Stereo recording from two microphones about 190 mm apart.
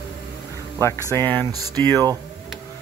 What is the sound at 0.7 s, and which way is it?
Speech, 15° left (ahead or behind).